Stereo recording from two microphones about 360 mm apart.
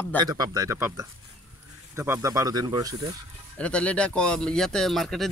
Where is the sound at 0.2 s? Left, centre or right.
Centre.